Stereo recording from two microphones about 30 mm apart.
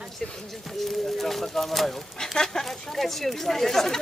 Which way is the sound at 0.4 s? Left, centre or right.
Centre.